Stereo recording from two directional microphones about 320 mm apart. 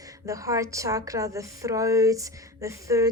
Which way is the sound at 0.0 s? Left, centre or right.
Centre.